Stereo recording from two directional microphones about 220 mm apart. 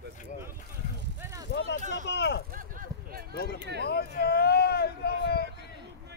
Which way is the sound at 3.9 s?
45° left (ahead or behind).